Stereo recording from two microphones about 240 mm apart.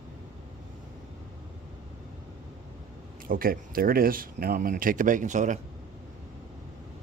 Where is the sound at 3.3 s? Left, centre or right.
Right.